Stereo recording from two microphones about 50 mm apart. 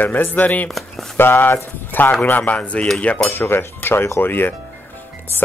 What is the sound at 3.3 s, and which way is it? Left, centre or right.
Speech, left.